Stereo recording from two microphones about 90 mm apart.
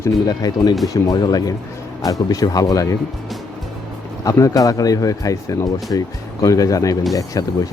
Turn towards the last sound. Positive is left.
turn(degrees=40)  # may be behind; listen again after turning